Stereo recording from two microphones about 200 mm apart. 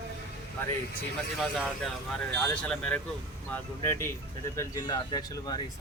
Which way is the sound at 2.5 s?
5° left (ahead or behind).